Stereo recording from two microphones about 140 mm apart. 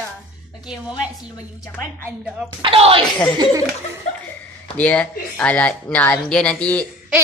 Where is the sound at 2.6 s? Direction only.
40° right (ahead or behind).